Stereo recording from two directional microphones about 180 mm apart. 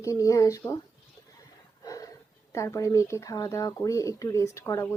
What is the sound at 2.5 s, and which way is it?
Speech, 15° left (ahead or behind).